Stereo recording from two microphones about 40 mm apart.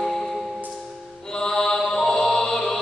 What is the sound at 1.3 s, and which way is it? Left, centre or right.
Mantra, centre.